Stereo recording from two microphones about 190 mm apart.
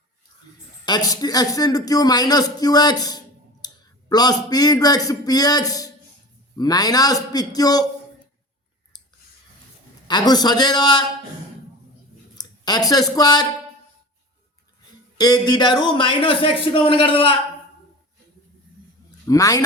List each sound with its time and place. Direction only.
0.9 s a man's voice: 20° left (ahead or behind)
10.1 s a man's voice: 20° left (ahead or behind)
12.4 s speech: 20° left (ahead or behind)
15.2 s a man's voice: 20° left (ahead or behind)
19.2 s a man's voice: 20° left (ahead or behind)